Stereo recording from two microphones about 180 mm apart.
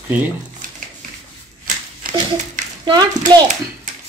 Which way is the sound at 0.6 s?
50° right (ahead or behind).